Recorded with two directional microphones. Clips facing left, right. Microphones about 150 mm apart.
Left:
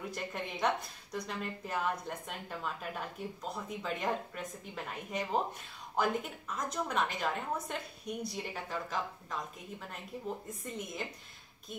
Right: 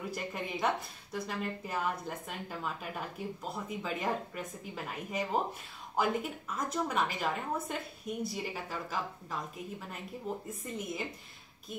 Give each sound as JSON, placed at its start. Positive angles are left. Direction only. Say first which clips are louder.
{"t": 0.1, "sound": "a woman's voice", "louder": "right 2 dB", "side_deg": -5}